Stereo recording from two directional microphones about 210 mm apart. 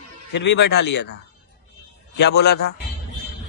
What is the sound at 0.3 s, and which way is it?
Speech, 55° left (ahead or behind).